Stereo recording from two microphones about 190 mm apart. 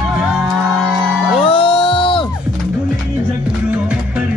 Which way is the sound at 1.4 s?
30° left (ahead or behind).